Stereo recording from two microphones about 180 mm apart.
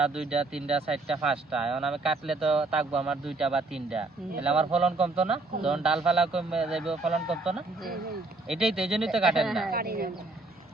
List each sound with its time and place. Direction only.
0.0 s speech: 5° right (ahead or behind)
9.7 s a woman's voice: 55° right (ahead or behind)